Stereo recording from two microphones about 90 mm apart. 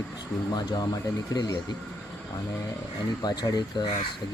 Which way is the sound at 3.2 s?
50° left (ahead or behind).